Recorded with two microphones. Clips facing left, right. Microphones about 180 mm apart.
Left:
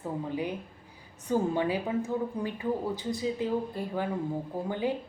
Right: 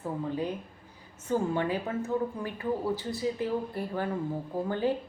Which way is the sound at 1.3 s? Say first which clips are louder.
Left 1 dB; 15° left (ahead or behind).